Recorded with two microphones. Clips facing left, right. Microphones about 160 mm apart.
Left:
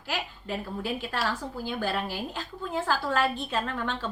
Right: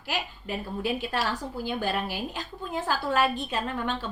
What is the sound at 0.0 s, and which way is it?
A woman's voice, 15° right (ahead or behind).